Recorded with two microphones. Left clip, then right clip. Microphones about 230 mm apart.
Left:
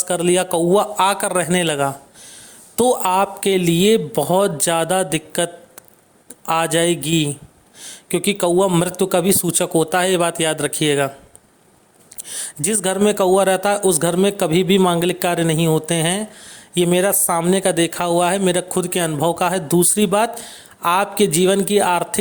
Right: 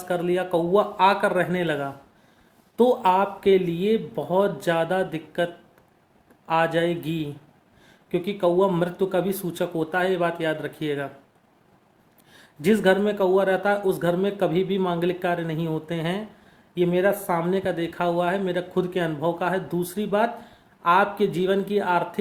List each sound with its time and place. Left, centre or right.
0.0 s speech: left
12.3 s speech: left